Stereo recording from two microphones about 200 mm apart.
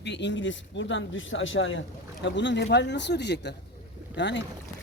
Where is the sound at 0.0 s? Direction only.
60° left (ahead or behind).